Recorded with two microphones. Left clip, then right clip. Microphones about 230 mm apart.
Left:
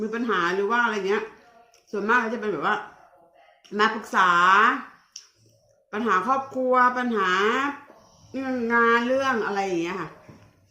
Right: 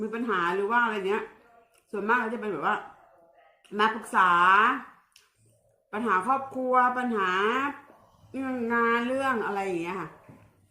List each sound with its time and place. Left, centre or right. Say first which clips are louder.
0.0 s a woman's voice: left 3 dB; centre
5.9 s a woman's voice: left 3 dB; centre